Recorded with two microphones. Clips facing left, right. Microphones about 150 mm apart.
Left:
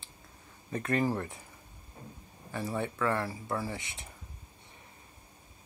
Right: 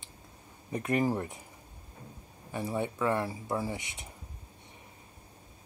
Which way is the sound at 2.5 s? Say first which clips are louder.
Right 1 dB; 15° right (ahead or behind).